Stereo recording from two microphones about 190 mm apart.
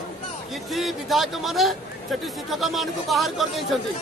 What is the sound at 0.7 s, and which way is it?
Speech, centre (ahead or behind).